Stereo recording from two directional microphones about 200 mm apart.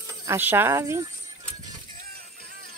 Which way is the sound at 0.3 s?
10° right (ahead or behind).